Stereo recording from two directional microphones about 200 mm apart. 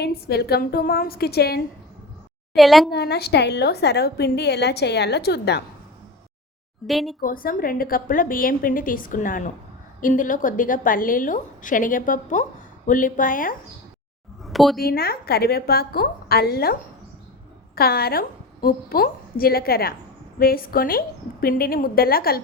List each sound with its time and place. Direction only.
0.0 s a woman's voice: 55° left (ahead or behind)
2.6 s speech: centre (ahead or behind)
2.9 s a woman's voice: 55° left (ahead or behind)
6.8 s speech: centre (ahead or behind)
7.2 s a woman's voice: 45° left (ahead or behind)
14.4 s a sound: centre (ahead or behind)
14.8 s a woman's voice: 50° left (ahead or behind)
17.7 s a woman's voice: 50° left (ahead or behind)